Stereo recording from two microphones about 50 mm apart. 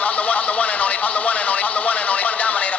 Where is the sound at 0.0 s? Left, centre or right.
Left.